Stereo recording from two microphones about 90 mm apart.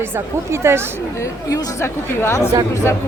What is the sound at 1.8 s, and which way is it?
Speech, 25° left (ahead or behind).